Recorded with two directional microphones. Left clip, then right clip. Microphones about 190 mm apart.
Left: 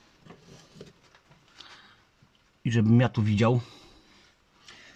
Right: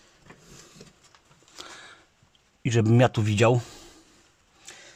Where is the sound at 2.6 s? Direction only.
40° right (ahead or behind).